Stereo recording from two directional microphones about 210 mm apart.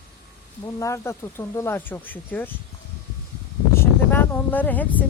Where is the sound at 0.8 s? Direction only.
15° left (ahead or behind).